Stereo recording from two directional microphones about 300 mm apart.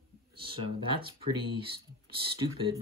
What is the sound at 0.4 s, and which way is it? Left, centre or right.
Speech, right.